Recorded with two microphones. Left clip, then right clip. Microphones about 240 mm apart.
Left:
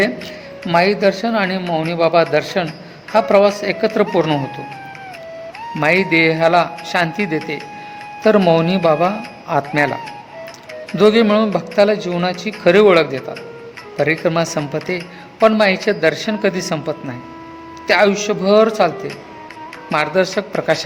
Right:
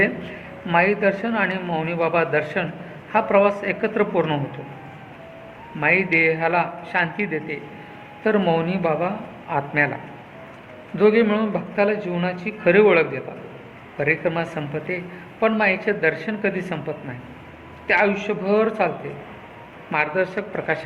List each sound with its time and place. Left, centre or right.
0.7 s speech: left
5.8 s speech: left
19.9 s speech: left